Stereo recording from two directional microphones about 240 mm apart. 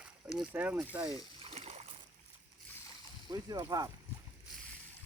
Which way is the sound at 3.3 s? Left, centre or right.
Centre.